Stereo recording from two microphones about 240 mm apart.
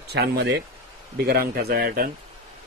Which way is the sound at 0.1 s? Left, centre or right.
Right.